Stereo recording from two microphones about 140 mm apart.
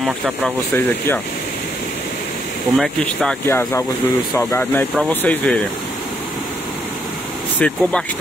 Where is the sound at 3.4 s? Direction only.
15° left (ahead or behind).